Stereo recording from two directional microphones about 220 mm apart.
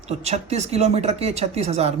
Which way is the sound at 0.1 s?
30° right (ahead or behind).